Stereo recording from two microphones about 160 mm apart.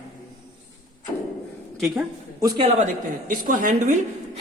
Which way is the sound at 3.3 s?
55° right (ahead or behind).